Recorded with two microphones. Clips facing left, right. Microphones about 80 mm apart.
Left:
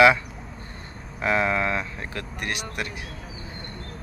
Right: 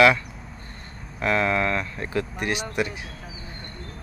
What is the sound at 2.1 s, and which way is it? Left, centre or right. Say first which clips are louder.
Speech: right 6 dB; centre.